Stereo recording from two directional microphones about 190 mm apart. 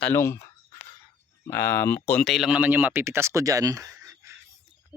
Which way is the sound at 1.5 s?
15° left (ahead or behind).